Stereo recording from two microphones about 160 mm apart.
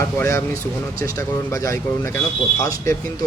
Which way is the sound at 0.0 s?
15° left (ahead or behind).